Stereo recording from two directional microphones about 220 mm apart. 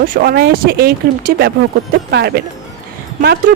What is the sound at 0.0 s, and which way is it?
Speech, 45° right (ahead or behind).